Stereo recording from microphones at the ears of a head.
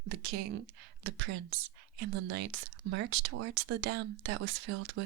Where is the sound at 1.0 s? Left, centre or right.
Right.